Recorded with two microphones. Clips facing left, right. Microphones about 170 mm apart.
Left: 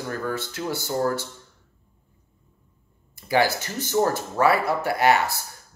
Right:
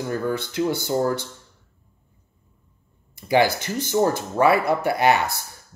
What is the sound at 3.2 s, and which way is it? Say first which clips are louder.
Speech: right 3 dB; 20° right (ahead or behind).